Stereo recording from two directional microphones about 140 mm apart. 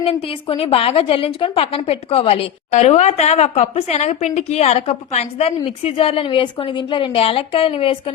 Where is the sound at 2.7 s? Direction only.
55° left (ahead or behind).